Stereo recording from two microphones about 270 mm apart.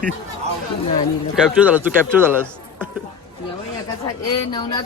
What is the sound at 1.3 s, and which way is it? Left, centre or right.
Speech, centre.